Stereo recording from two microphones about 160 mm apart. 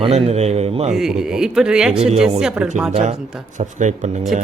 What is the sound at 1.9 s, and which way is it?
Speech, 40° right (ahead or behind).